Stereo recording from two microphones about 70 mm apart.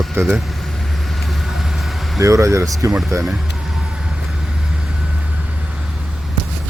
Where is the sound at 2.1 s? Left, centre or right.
Right.